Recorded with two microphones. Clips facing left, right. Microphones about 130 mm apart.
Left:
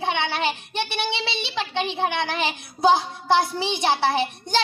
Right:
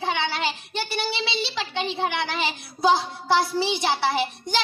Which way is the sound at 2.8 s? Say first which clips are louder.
Left 2 dB; 25° left (ahead or behind).